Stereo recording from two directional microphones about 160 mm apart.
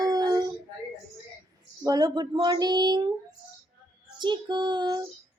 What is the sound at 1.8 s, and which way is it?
Speech, 25° right (ahead or behind).